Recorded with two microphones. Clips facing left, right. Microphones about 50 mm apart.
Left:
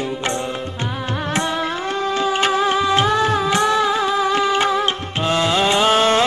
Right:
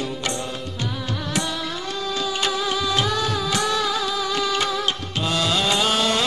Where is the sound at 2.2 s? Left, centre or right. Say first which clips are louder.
Left 7 dB; left.